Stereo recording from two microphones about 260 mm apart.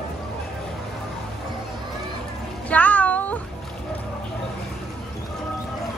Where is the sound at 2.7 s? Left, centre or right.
Centre.